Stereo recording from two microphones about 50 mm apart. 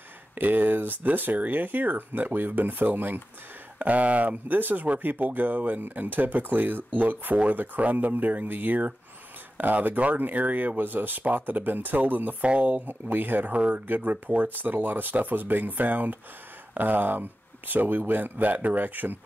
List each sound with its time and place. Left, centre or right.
0.4 s speech: right
12.4 s speech: right
12.8 s speech: right